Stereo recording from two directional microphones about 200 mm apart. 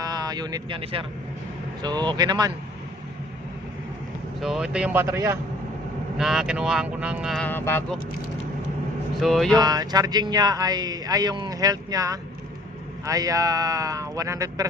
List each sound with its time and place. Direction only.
0.0 s speech: 20° right (ahead or behind)
4.4 s speech: 5° right (ahead or behind)
6.1 s speech: centre (ahead or behind)
9.1 s speech: centre (ahead or behind)
9.6 s speech: 20° right (ahead or behind)